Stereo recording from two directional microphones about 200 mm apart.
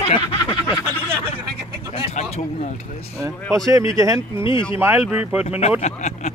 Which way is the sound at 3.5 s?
15° right (ahead or behind).